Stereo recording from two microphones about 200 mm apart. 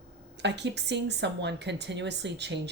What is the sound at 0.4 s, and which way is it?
A woman's voice, 60° right (ahead or behind).